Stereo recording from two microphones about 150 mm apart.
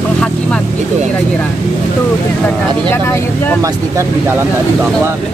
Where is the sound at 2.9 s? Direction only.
15° left (ahead or behind).